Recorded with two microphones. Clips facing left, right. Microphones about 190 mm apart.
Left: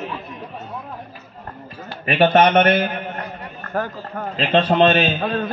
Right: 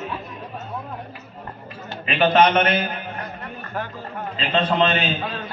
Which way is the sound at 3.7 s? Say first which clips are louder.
Left 6 dB; 45° left (ahead or behind).